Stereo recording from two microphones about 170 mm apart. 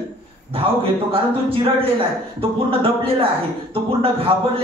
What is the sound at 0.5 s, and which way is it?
A woman's voice, 35° right (ahead or behind).